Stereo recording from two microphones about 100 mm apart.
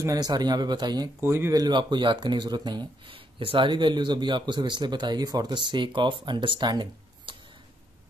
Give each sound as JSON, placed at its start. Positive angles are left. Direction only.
{"t": 0.0, "sound": "speech", "side_deg": -40}
{"t": 1.2, "sound": "speech", "side_deg": -25}
{"t": 1.5, "sound": "speech", "side_deg": -45}
{"t": 3.3, "sound": "speech", "side_deg": -60}